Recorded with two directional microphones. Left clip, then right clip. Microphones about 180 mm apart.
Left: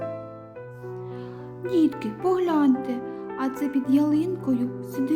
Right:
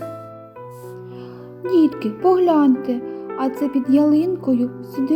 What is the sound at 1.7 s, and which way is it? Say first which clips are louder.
Speech: right 6 dB; 10° right (ahead or behind).